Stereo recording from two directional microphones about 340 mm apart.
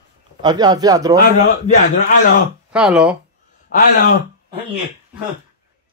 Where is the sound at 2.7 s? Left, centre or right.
Centre.